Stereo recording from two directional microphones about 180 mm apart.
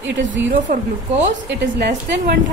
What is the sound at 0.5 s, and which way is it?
Speech, 45° right (ahead or behind).